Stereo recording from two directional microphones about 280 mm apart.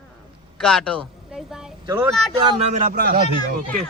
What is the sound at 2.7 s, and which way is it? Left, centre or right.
Speech, right.